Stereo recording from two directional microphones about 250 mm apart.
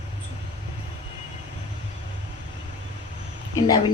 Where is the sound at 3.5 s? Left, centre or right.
Centre.